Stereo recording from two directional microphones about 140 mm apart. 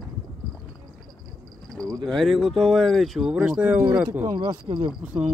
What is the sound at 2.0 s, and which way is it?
Speech, centre (ahead or behind).